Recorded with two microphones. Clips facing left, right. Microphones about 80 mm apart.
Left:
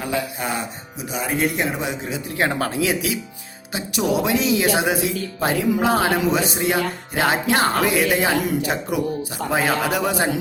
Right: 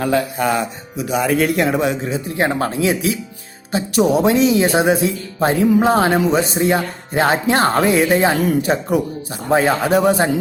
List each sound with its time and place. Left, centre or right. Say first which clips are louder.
0.0 s speech: right 7 dB; right
1.1 s speech: right 6 dB; right
2.0 s speech: right 4 dB; right